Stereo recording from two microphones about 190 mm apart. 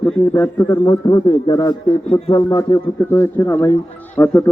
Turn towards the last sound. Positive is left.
turn(degrees=10)  # may be behind; listen again after turning